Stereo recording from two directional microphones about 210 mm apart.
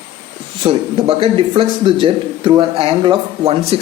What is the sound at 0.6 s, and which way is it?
A man's voice, 25° right (ahead or behind).